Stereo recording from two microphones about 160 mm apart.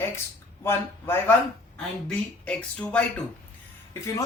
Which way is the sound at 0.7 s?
15° left (ahead or behind).